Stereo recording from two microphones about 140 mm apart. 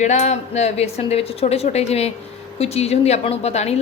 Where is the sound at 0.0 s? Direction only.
55° left (ahead or behind).